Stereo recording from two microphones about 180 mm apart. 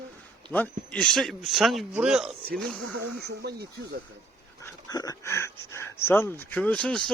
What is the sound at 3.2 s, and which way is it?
Speech, 65° right (ahead or behind).